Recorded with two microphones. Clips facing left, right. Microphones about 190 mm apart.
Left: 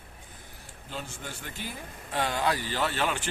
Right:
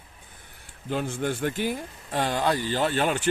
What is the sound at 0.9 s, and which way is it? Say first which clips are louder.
Speech: right 12 dB; 60° right (ahead or behind).